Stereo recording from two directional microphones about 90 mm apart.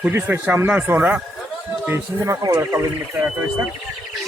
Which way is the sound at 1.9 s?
30° right (ahead or behind).